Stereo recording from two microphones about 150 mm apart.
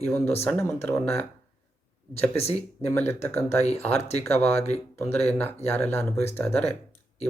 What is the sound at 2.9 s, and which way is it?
Speech, 15° left (ahead or behind).